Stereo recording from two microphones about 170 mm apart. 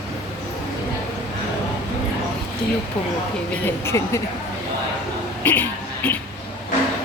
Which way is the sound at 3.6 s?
15° left (ahead or behind).